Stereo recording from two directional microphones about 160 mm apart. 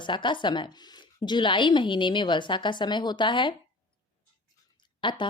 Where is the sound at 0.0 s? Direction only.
30° left (ahead or behind).